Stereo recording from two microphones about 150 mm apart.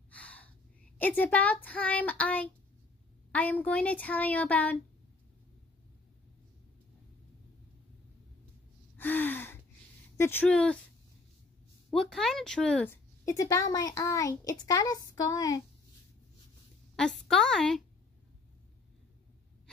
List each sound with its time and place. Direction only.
0.1 s gasp: 10° left (ahead or behind)
0.9 s speech: 10° left (ahead or behind)
8.9 s gasp: 15° left (ahead or behind)
10.1 s speech: 15° left (ahead or behind)
11.9 s speech: 5° left (ahead or behind); by 15.6 s 25° left (ahead or behind)
16.9 s a woman's voice: 5° left (ahead or behind)